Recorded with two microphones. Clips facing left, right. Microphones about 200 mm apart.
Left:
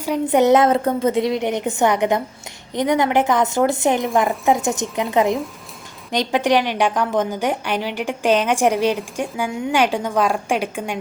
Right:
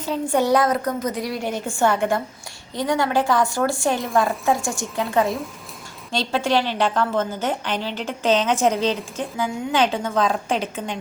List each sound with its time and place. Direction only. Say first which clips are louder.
0.0 s a woman's voice: left 5 dB; 15° left (ahead or behind)